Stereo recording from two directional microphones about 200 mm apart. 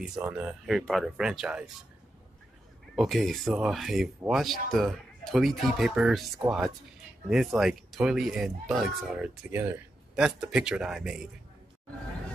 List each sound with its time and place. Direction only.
0.0 s speech: 5° right (ahead or behind)
3.0 s speech: centre (ahead or behind)